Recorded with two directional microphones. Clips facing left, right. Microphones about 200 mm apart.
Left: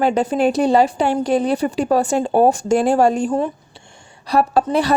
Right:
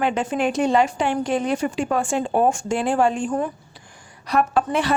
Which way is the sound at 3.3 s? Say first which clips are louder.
Left 4 dB; 25° left (ahead or behind).